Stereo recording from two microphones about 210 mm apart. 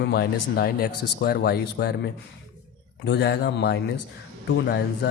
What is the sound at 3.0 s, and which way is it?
Speech, 55° left (ahead or behind).